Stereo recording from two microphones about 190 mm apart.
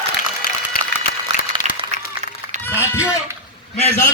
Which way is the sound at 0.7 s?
50° left (ahead or behind).